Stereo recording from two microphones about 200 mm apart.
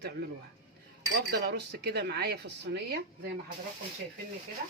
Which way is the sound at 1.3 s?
60° right (ahead or behind).